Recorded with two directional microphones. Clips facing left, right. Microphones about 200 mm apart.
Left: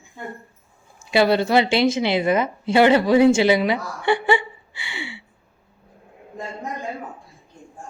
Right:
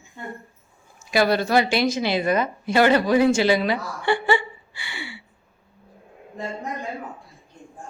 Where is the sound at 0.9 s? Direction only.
25° left (ahead or behind).